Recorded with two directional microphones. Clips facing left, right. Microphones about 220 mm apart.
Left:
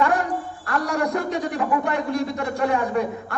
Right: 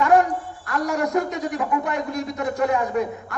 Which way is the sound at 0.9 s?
30° left (ahead or behind).